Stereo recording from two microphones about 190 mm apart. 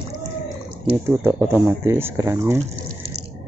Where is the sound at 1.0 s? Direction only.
10° right (ahead or behind).